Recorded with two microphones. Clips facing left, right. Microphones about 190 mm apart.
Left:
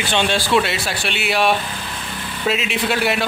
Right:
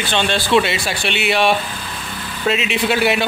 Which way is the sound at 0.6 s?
Centre (ahead or behind).